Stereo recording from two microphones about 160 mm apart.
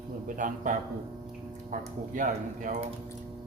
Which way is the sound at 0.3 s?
55° right (ahead or behind).